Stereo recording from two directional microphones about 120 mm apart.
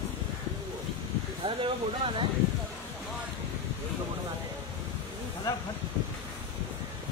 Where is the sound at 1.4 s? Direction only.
45° right (ahead or behind).